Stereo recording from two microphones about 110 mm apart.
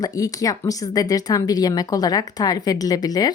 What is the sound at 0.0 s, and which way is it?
Speech, 30° left (ahead or behind).